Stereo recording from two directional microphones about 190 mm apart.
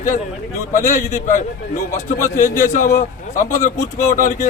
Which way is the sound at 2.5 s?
40° left (ahead or behind).